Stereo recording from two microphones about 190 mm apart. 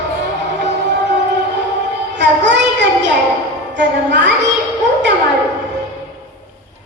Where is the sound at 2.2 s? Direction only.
65° right (ahead or behind).